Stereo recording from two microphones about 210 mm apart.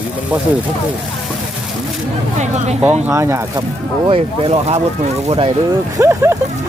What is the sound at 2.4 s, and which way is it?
Speech, 30° right (ahead or behind).